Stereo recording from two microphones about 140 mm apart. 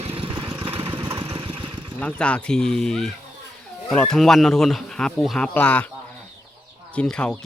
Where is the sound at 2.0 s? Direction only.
10° left (ahead or behind).